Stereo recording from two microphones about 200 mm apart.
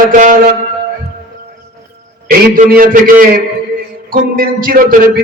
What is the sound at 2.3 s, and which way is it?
A man's voice, 45° right (ahead or behind).